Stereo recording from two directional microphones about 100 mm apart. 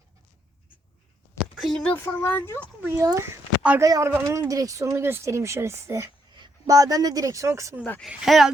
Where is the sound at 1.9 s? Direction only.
20° left (ahead or behind).